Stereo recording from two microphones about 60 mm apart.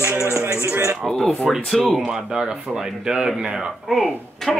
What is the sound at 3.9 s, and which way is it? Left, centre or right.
Speech, centre.